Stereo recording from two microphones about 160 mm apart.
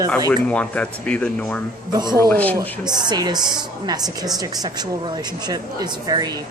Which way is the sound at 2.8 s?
25° right (ahead or behind).